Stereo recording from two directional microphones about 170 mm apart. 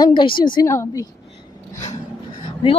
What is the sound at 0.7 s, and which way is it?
Speech, 15° left (ahead or behind).